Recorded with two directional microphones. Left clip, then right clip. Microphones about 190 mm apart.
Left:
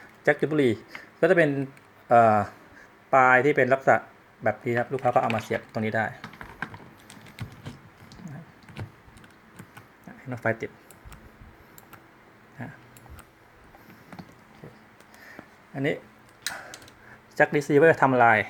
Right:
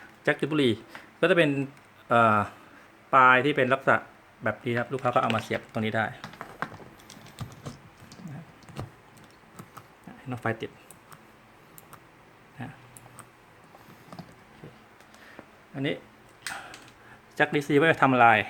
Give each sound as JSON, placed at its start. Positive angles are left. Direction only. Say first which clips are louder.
{"t": 0.3, "sound": "speech", "louder": "left 3 dB", "side_deg": -5}
{"t": 7.3, "sound": "typing", "louder": "right 1 dB", "side_deg": -25}
{"t": 10.2, "sound": "speech", "louder": "left 3 dB", "side_deg": -5}
{"t": 15.7, "sound": "speech", "louder": "left 3 dB", "side_deg": 10}
{"t": 17.3, "sound": "speech", "louder": "left 3 dB", "side_deg": 5}